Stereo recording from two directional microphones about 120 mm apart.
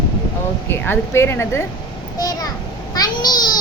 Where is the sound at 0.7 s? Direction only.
20° left (ahead or behind).